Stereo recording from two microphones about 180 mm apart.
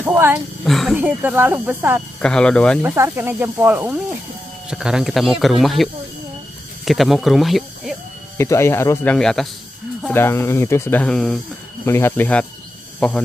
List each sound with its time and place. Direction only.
0.0 s speech: 10° right (ahead or behind)
0.7 s speech: centre (ahead or behind)
1.0 s speech: 10° right (ahead or behind)
2.1 s speech: 5° left (ahead or behind)
2.8 s speech: 15° right (ahead or behind)
8.4 s speech: 15° left (ahead or behind)
11.8 s speech: 15° left (ahead or behind)